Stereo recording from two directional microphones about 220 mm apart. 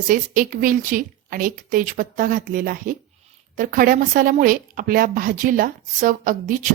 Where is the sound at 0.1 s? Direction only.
40° right (ahead or behind).